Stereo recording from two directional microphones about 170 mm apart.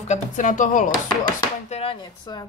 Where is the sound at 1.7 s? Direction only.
35° left (ahead or behind).